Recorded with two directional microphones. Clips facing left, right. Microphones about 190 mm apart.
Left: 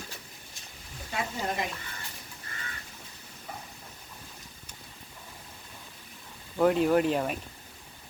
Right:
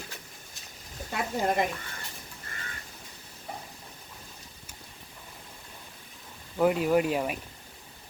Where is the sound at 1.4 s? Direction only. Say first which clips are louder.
Right 8 dB; 55° right (ahead or behind).